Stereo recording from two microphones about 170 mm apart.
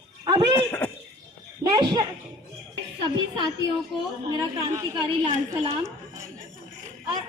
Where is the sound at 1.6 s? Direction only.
20° right (ahead or behind).